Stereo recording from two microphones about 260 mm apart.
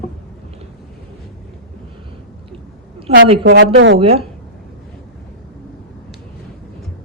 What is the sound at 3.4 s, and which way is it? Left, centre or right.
Speech, right.